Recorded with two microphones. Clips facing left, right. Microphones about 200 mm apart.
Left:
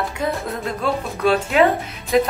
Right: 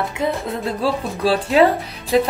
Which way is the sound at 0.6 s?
35° right (ahead or behind).